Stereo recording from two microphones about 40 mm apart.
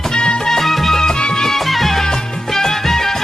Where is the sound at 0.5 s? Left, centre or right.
Centre.